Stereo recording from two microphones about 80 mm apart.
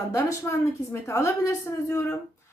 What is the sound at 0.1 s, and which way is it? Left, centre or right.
A woman's voice, left.